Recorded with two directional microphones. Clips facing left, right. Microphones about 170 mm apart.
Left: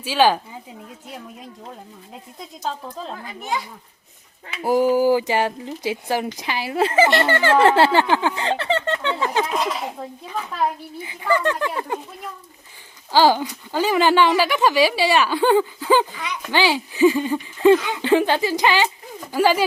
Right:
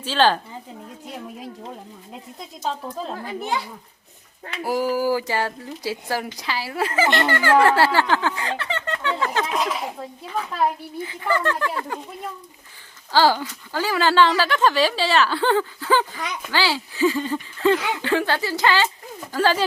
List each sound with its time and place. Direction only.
0.0 s speech: 10° left (ahead or behind)
3.1 s a child's voice: 35° right (ahead or behind)
4.6 s speech: 20° left (ahead or behind)
8.4 s speech: 30° left (ahead or behind)
9.1 s speech: 15° left (ahead or behind)
9.5 s speech: centre (ahead or behind)
11.0 s speech: 15° left (ahead or behind)
13.1 s speech: 15° left (ahead or behind)